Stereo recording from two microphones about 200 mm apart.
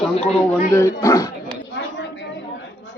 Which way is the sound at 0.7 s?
15° left (ahead or behind).